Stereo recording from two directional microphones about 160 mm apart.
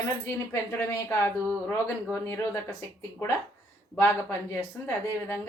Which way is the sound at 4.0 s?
20° left (ahead or behind).